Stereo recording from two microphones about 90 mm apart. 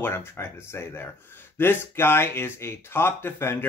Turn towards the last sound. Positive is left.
turn(degrees=25)  # may be behind; listen again after turning